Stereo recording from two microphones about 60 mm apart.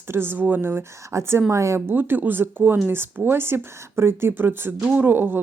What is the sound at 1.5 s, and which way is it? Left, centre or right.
Speech, right.